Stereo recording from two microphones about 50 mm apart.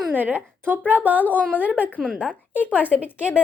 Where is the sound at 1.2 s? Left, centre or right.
Left.